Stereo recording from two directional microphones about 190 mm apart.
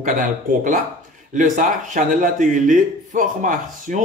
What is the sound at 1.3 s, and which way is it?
Speech, 45° right (ahead or behind).